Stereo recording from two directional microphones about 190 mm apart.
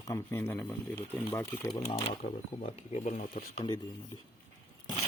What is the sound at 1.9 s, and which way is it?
Speech, 25° left (ahead or behind).